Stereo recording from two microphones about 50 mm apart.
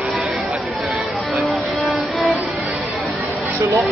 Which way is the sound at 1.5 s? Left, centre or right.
Centre.